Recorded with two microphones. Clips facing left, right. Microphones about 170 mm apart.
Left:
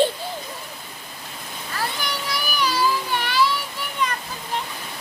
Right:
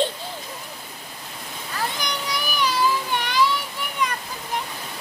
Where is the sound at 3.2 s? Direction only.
15° right (ahead or behind).